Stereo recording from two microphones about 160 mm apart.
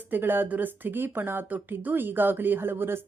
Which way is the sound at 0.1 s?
15° right (ahead or behind).